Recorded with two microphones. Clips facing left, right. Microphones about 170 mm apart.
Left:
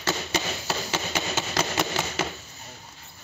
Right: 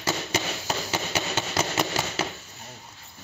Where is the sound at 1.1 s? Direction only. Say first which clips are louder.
Even; centre (ahead or behind).